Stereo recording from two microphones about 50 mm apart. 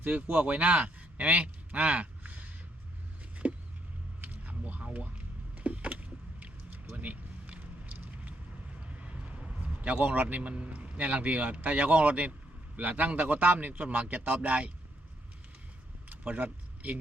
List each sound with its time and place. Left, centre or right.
0.0 s a man's voice: right
3.4 s a sound: right
4.9 s power windows: right
8.8 s a man's voice: right
16.0 s vehicle: right